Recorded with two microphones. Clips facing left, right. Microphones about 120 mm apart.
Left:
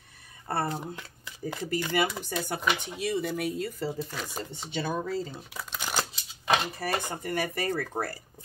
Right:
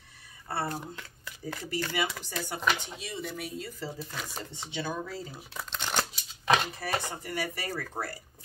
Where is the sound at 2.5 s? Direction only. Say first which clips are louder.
Right 1 dB; 60° left (ahead or behind).